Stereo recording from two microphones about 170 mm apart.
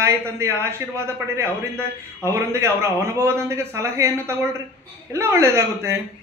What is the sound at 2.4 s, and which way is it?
A woman's voice, 15° right (ahead or behind).